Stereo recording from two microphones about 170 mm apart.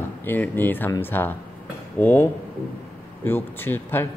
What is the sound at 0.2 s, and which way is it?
Speech, 10° left (ahead or behind).